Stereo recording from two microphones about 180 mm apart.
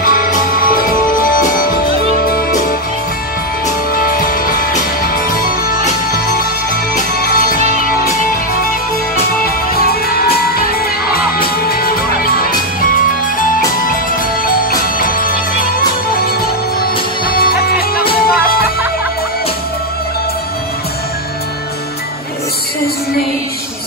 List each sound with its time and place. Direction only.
0.0 s music: 50° left (ahead or behind)
3.9 s music: 55° left (ahead or behind)
7.8 s music: 55° left (ahead or behind)
9.8 s music: 60° left (ahead or behind)
14.7 s music: 50° left (ahead or behind)
17.3 s music: 55° left (ahead or behind)